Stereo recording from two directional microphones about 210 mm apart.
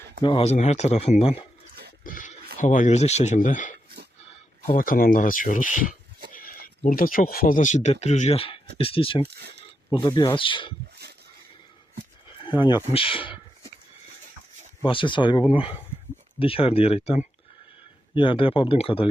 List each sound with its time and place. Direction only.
0.2 s speech: 25° left (ahead or behind)
2.0 s a sound: 40° left (ahead or behind)
2.6 s speech: 35° left (ahead or behind)
9.2 s speech: 50° right (ahead or behind)
9.9 s speech: 20° left (ahead or behind)
12.5 s speech: 20° left (ahead or behind)
14.8 s speech: 25° left (ahead or behind)